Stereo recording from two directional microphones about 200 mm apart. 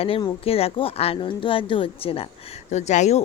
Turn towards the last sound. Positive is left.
turn(degrees=35)  # may be behind; listen again after turning